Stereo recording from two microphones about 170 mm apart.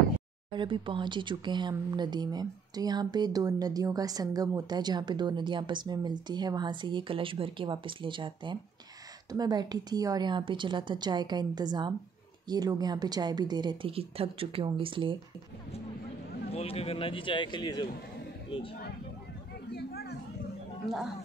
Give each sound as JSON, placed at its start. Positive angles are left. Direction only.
{"t": 0.5, "sound": "speech", "side_deg": -30}
{"t": 16.5, "sound": "speech", "side_deg": 35}
{"t": 19.7, "sound": "a sound", "side_deg": 70}